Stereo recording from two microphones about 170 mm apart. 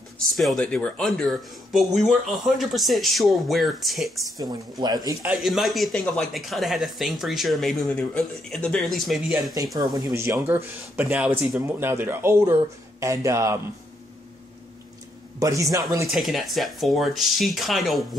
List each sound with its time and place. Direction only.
0.4 s speech: centre (ahead or behind)
4.4 s speech: 25° right (ahead or behind)
5.2 s speech: 5° right (ahead or behind)
9.8 s speech: 20° right (ahead or behind)
15.3 s speech: 20° right (ahead or behind)
16.1 s speech: centre (ahead or behind)